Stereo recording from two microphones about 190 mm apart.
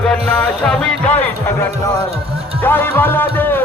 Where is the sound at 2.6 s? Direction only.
10° left (ahead or behind).